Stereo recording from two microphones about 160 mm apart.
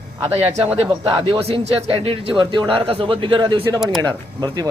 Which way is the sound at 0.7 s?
35° right (ahead or behind).